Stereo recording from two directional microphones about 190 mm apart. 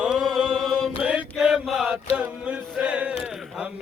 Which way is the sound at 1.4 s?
Centre (ahead or behind).